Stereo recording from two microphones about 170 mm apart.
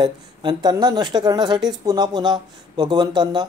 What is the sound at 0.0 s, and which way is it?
Speech, 25° right (ahead or behind).